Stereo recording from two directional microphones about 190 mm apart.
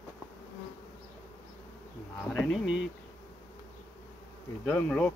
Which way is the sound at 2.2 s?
5° left (ahead or behind).